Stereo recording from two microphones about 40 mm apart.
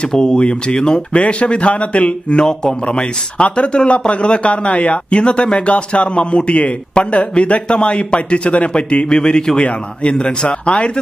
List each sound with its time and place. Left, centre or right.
0.1 s speech: centre
1.2 s speech: left